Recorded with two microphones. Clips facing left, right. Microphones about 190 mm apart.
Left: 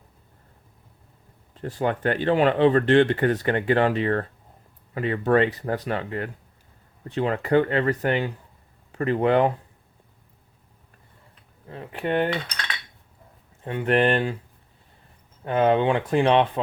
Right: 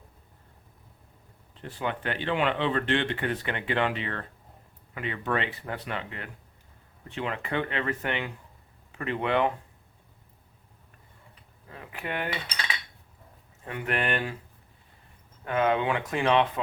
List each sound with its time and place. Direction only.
1.6 s speech: 40° left (ahead or behind)
11.7 s speech: 30° left (ahead or behind)
12.3 s cutlery: 5° right (ahead or behind)
13.7 s speech: 30° left (ahead or behind)
15.4 s speech: 30° left (ahead or behind)